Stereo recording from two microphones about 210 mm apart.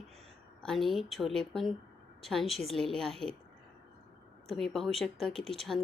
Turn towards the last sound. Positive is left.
turn(degrees=0)  # may be behind; listen again after turning